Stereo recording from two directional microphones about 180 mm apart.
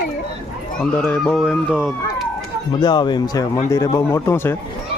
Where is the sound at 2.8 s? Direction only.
25° left (ahead or behind).